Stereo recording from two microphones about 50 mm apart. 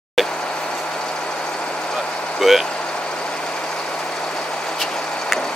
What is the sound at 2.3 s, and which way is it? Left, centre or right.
Speech, centre.